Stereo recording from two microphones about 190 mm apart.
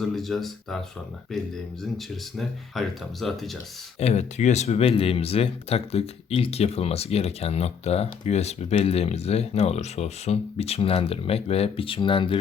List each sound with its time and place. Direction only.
0.0 s speech: centre (ahead or behind)
2.4 s speech: centre (ahead or behind)
4.0 s speech: 35° left (ahead or behind)